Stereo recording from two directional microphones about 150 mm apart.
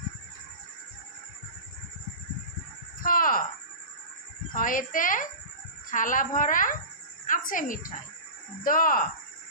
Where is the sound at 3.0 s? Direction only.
70° left (ahead or behind).